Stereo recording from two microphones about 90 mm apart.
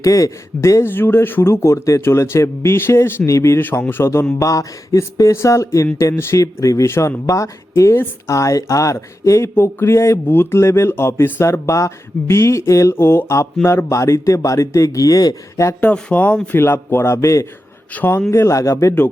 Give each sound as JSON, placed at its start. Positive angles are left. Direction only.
{"t": 0.0, "sound": "speech", "side_deg": 35}
{"t": 15.8, "sound": "speech", "side_deg": 15}
{"t": 17.9, "sound": "speech", "side_deg": 25}